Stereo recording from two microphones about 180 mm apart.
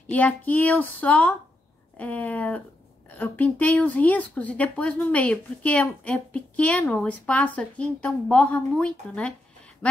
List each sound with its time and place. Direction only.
0.0 s a woman's voice: 10° left (ahead or behind)